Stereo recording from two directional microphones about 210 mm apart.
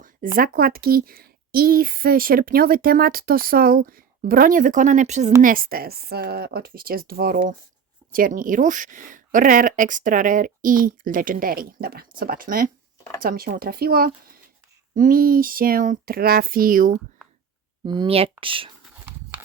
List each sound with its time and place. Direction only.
0.3 s speech: 45° right (ahead or behind)
17.8 s speech: 20° right (ahead or behind)
19.0 s horse: 10° right (ahead or behind)